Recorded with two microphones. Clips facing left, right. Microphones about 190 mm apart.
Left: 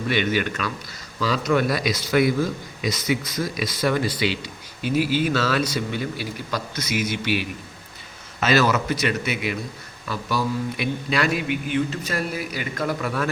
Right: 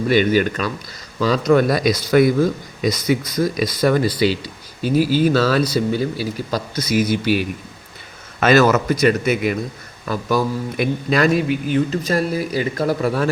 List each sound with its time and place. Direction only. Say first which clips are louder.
0.1 s a man's voice: right 7 dB; 40° right (ahead or behind)
8.4 s a man's voice: right 6 dB; 50° right (ahead or behind); by 13.3 s 30° right (ahead or behind)